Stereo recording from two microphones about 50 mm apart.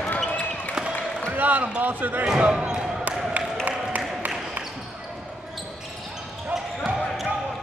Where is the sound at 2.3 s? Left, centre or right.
Right.